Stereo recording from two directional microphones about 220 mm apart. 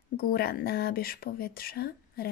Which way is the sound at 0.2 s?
40° left (ahead or behind).